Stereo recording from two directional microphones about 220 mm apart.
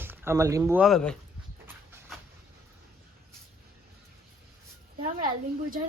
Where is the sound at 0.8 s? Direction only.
Centre (ahead or behind).